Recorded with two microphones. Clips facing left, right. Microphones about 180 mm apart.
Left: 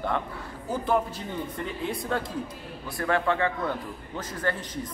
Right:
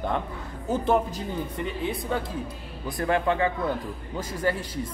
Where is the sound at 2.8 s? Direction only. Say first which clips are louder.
Right 2 dB; 20° right (ahead or behind).